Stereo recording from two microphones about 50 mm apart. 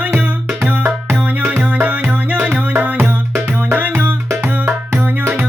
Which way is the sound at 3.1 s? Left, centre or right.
Right.